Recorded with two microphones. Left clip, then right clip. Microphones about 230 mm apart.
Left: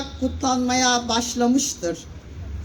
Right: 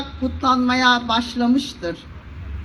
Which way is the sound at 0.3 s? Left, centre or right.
Left.